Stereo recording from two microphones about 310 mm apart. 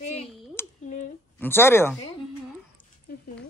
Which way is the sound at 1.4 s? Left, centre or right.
Centre.